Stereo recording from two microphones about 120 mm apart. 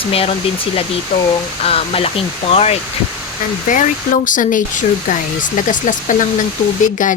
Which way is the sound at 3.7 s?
90° left.